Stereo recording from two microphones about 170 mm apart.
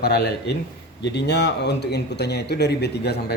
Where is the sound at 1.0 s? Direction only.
85° left.